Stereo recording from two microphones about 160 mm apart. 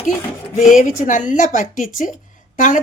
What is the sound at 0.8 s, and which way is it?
Speech, 55° left (ahead or behind).